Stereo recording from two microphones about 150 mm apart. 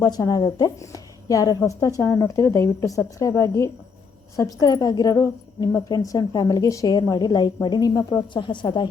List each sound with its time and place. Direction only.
0.0 s a woman's voice: 25° left (ahead or behind)